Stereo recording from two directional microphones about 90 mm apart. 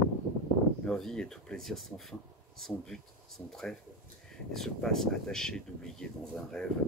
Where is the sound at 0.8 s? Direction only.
5° left (ahead or behind).